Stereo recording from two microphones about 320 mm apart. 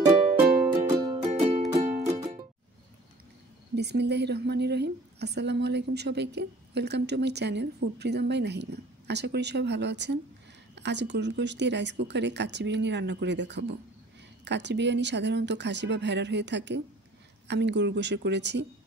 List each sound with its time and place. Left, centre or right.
0.5 s music: centre
3.7 s a woman's voice: right